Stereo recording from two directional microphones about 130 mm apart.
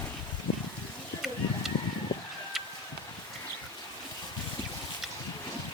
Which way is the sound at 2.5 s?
Centre (ahead or behind).